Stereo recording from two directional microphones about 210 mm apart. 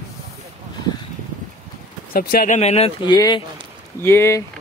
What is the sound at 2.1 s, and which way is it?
Speech, 40° left (ahead or behind).